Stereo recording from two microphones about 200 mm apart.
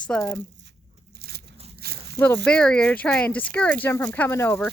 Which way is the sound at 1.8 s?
50° right (ahead or behind).